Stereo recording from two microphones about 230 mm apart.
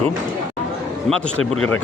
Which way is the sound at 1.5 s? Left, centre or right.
Left.